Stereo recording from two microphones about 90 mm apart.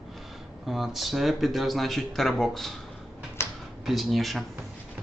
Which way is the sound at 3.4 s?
30° left (ahead or behind).